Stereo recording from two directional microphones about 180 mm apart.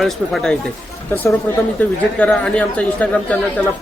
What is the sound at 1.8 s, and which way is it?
Speech, 5° left (ahead or behind).